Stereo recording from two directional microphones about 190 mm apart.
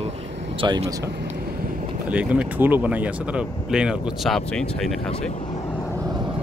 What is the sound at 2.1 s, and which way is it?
Speech, 10° right (ahead or behind).